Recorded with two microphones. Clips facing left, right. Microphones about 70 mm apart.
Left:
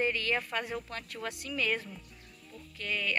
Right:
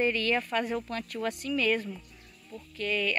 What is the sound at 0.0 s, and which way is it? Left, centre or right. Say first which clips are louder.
Speech: right 4 dB; centre.